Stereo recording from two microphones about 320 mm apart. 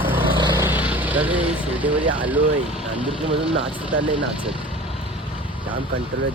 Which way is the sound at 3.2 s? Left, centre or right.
Centre.